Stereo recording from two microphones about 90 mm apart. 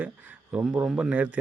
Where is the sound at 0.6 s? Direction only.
5° right (ahead or behind).